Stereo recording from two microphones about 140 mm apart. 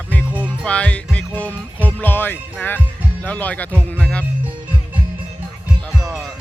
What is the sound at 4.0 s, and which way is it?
Speech, 10° left (ahead or behind).